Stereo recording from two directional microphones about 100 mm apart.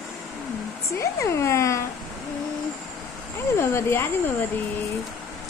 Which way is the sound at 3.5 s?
25° left (ahead or behind).